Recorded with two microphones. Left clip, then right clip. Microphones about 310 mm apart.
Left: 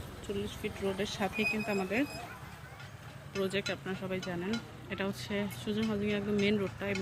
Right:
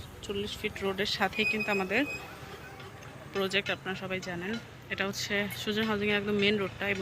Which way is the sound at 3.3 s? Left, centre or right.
Centre.